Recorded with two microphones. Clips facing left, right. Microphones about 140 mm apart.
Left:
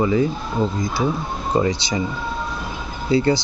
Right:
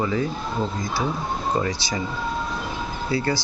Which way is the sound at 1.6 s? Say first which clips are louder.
Left 5 dB; 20° left (ahead or behind).